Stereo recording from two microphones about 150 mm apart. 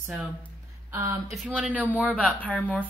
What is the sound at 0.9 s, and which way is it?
Speech, 20° right (ahead or behind).